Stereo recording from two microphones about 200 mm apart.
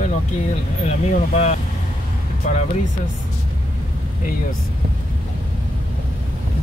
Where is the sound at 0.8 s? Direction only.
35° left (ahead or behind).